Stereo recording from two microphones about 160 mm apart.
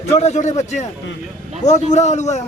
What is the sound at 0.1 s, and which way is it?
A man's voice, 45° left (ahead or behind).